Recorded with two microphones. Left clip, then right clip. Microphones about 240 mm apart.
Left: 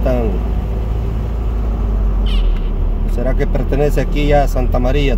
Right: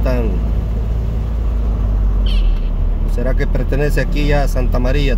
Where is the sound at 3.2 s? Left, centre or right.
Centre.